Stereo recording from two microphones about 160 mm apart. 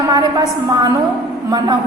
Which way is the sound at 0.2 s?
25° right (ahead or behind).